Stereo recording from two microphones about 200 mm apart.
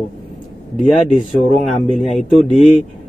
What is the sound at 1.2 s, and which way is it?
Speech, 30° left (ahead or behind).